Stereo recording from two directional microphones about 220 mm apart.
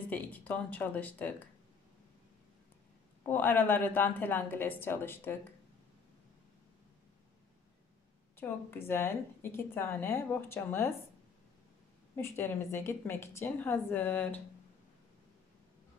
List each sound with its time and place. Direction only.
0.1 s a woman's voice: 5° left (ahead or behind)
3.3 s a woman's voice: 10° left (ahead or behind)
8.4 s a woman's voice: 10° left (ahead or behind)
12.2 s a woman's voice: 10° left (ahead or behind)